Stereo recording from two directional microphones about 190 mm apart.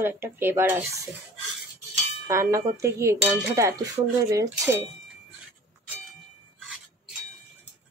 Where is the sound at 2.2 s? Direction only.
15° right (ahead or behind).